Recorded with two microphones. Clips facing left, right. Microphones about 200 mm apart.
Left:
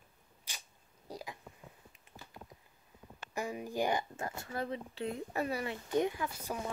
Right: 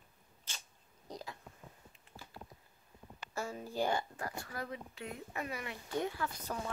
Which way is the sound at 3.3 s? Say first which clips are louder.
Left 2 dB; 15° left (ahead or behind).